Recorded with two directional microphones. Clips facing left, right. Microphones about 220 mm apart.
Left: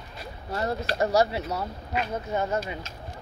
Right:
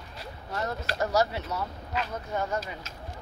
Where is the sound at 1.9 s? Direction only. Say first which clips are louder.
Left 5 dB; 20° left (ahead or behind).